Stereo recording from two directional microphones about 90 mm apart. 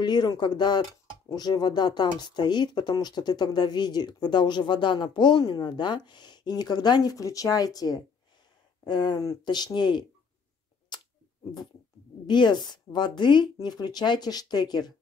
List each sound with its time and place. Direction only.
0.0 s speech: 50° left (ahead or behind)
8.8 s speech: 55° left (ahead or behind)
12.3 s speech: 55° left (ahead or behind)